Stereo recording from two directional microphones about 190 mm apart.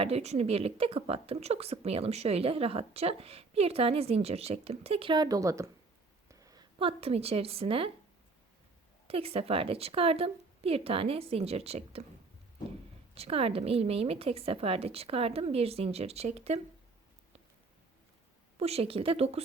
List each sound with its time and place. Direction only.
0.0 s a woman's voice: 35° right (ahead or behind)
9.0 s a woman's voice: 30° right (ahead or behind)
13.1 s a woman's voice: 30° right (ahead or behind)
18.6 s a woman's voice: 30° right (ahead or behind)